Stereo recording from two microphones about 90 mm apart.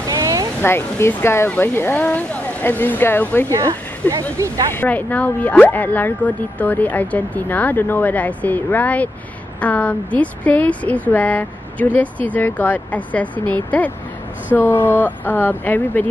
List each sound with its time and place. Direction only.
0.1 s a sound: 40° right (ahead or behind)
0.6 s speech: 25° left (ahead or behind)
4.1 s speech: 40° right (ahead or behind)
4.7 s a woman's voice: 20° left (ahead or behind)